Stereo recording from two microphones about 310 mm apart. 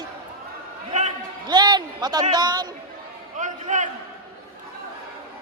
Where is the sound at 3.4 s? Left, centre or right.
Right.